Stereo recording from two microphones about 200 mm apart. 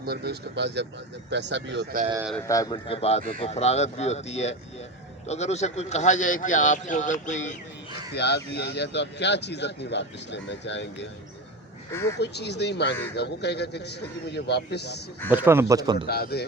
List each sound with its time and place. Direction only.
0.0 s speech: 50° right (ahead or behind)
2.5 s speech: 20° left (ahead or behind); by 7.5 s 35° left (ahead or behind)
8.1 s speech: 55° left (ahead or behind)
12.2 s speech: 55° left (ahead or behind)
15.3 s speech: 10° right (ahead or behind)
16.0 s speech: 50° left (ahead or behind)